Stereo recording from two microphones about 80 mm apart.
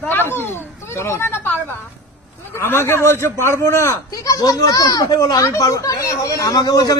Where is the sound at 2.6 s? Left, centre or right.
Left.